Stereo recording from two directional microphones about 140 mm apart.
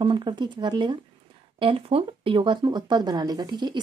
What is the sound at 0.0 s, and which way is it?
Speech, 35° right (ahead or behind).